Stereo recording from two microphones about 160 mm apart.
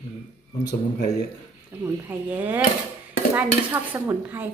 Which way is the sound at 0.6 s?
90° left.